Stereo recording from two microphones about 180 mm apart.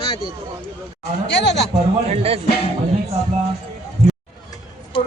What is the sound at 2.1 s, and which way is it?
Speech, 35° right (ahead or behind).